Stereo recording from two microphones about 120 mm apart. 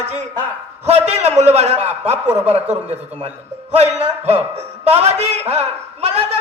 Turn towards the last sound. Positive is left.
turn(degrees=-60)  # may be behind; listen again after turning